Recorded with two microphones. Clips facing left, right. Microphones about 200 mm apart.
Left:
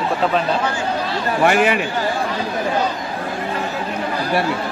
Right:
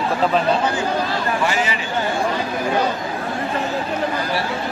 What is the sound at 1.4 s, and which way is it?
Speech, 60° left (ahead or behind).